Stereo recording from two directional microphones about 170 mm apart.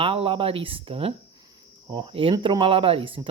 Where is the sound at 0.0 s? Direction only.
30° right (ahead or behind).